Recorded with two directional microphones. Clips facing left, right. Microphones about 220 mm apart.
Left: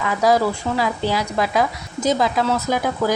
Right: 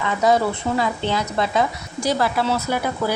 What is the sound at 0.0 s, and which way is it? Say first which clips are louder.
Speech: left 1 dB; 5° left (ahead or behind).